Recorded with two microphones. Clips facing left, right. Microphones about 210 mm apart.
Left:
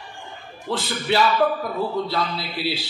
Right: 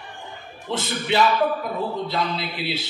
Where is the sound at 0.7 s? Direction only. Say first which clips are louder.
Left 1 dB; 20° right (ahead or behind).